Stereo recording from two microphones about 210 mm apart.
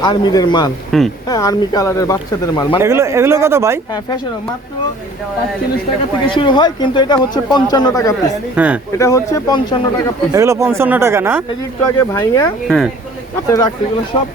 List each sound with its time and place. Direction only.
0.0 s speech: 20° left (ahead or behind)
0.9 s speech: centre (ahead or behind)
1.3 s speech: 15° left (ahead or behind)
2.8 s speech: 15° right (ahead or behind)
6.2 s speech: 25° left (ahead or behind)
8.5 s speech: 5° right (ahead or behind)
9.0 s speech: 15° left (ahead or behind)
10.3 s speech: 15° right (ahead or behind)
11.9 s speech: 10° left (ahead or behind)
12.6 s speech: centre (ahead or behind)
13.5 s speech: 20° left (ahead or behind)